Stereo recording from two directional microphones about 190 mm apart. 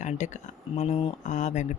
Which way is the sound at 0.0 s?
40° left (ahead or behind).